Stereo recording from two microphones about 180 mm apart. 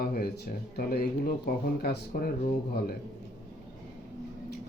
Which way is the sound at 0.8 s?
60° left (ahead or behind).